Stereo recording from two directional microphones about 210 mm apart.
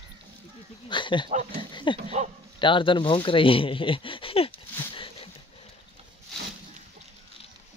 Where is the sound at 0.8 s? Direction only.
20° left (ahead or behind).